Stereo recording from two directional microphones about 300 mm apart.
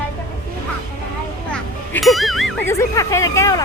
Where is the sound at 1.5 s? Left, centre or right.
Centre.